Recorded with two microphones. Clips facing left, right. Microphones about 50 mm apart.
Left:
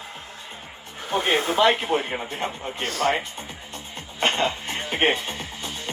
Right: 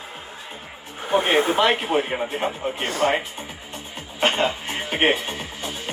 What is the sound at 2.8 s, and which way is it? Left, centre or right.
Speech, centre.